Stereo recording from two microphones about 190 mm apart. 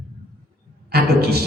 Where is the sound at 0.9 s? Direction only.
55° right (ahead or behind).